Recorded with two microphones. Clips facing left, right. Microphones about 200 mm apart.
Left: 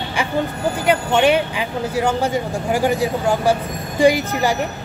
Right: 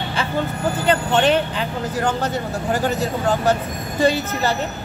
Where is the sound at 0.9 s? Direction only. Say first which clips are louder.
Left 2 dB; 10° left (ahead or behind).